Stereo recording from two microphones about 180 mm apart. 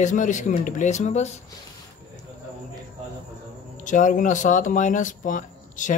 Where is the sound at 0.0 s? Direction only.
45° left (ahead or behind).